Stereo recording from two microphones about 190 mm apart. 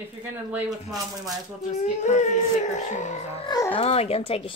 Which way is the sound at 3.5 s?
20° left (ahead or behind).